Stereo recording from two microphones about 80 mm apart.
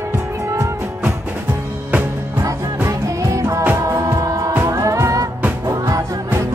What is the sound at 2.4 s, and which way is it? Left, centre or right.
Music, right.